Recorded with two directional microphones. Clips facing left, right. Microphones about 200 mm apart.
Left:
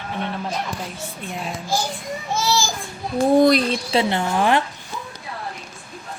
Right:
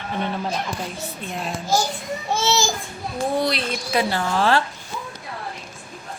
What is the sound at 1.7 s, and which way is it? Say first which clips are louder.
Speech: right 3 dB; 40° right (ahead or behind).